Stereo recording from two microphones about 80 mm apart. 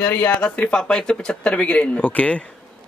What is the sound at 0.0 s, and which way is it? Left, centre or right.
A man's voice, centre.